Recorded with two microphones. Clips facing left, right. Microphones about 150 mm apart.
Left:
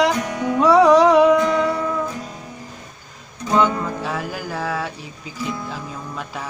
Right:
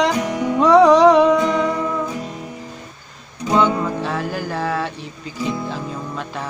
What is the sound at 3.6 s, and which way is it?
Music, 10° left (ahead or behind).